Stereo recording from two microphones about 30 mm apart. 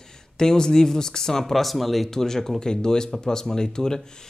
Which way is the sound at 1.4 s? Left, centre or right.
Centre.